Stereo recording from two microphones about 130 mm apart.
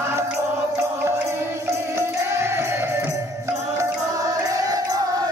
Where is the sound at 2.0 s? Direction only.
20° right (ahead or behind).